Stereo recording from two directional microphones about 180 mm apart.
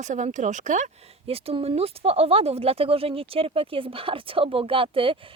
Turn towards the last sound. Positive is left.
turn(degrees=-30)  # may be behind; listen again after turning